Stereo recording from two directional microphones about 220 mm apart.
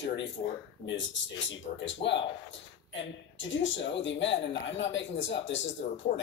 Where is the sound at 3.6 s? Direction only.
60° left (ahead or behind).